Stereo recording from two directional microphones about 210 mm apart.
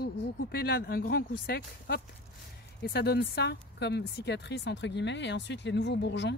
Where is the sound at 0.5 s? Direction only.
50° left (ahead or behind).